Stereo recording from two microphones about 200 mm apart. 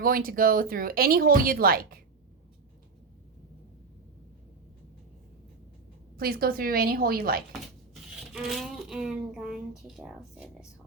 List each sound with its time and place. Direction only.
0.0 s speech: 45° right (ahead or behind)
6.1 s speech: 50° right (ahead or behind)
8.3 s speech: centre (ahead or behind)